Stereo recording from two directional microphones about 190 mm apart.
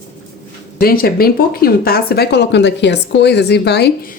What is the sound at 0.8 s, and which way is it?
A woman's voice, 50° left (ahead or behind).